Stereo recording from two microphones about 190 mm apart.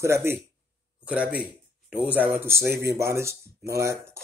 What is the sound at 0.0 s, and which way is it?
Speech, 15° right (ahead or behind).